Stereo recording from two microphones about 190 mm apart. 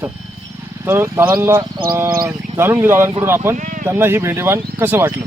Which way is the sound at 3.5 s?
40° right (ahead or behind).